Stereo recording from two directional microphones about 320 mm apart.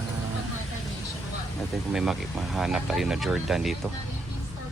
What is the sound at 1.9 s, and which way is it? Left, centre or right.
Speech, centre.